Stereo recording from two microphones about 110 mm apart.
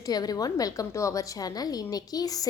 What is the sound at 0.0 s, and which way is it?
A woman's voice, 35° left (ahead or behind).